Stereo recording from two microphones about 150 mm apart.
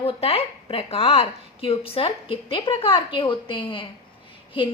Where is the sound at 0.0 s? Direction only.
40° left (ahead or behind).